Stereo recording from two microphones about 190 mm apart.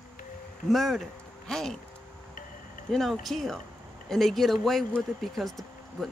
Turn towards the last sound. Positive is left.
turn(degrees=0)  # may be behind; listen again after turning